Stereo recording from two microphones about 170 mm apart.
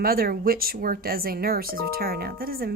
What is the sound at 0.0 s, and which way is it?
Speech, 60° right (ahead or behind).